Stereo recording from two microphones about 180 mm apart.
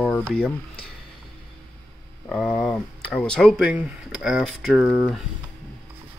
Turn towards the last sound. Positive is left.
turn(degrees=-10)  # may be behind; listen again after turning